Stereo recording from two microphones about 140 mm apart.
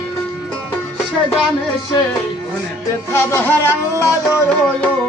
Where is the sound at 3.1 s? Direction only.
15° left (ahead or behind).